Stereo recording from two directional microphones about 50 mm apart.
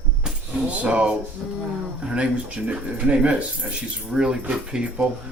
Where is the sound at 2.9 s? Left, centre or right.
Right.